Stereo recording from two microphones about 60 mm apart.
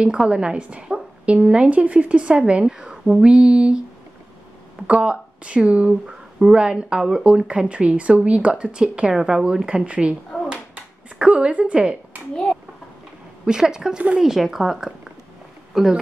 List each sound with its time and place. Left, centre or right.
0.0 s speech: centre
4.8 s speech: centre
10.5 s a sound: centre
13.5 s speech: centre